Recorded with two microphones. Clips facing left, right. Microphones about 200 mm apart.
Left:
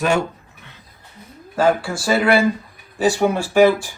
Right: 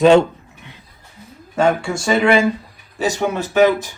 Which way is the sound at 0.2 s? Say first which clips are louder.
Right 6 dB; 15° right (ahead or behind).